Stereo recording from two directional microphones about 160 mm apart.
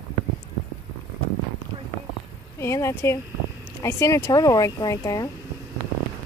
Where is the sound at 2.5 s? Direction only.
15° left (ahead or behind).